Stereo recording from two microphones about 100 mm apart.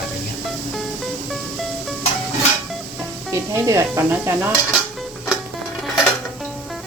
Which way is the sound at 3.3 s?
30° right (ahead or behind).